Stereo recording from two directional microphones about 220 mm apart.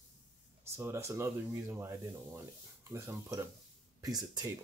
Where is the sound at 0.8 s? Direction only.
10° right (ahead or behind).